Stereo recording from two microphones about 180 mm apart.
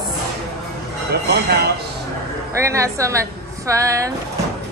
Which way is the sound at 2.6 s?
15° right (ahead or behind).